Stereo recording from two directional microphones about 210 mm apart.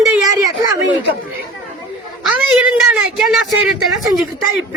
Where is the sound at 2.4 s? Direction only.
5° right (ahead or behind).